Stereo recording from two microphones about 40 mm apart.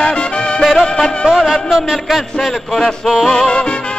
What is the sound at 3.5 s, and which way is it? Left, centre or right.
Music, left.